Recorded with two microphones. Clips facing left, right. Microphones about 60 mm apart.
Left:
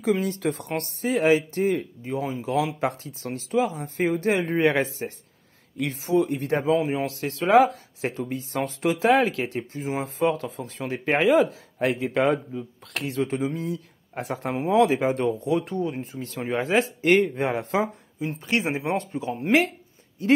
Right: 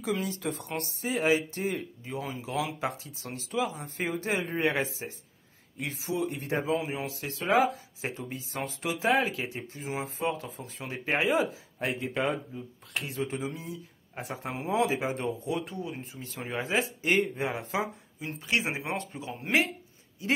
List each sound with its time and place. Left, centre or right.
0.2 s speech: left
7.1 s a man's voice: left
9.7 s a man's voice: left
10.0 s a man's voice: left
14.5 s a man's voice: left
18.2 s a man's voice: left
18.7 s speech: left